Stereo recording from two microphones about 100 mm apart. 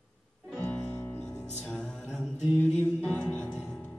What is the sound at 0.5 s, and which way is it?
Music, 15° left (ahead or behind).